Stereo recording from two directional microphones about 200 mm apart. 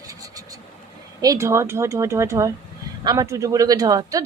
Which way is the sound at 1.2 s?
15° right (ahead or behind).